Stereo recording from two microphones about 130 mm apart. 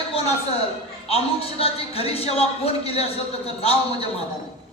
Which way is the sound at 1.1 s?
50° left (ahead or behind).